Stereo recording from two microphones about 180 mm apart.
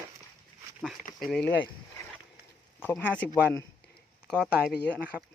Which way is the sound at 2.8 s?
10° left (ahead or behind).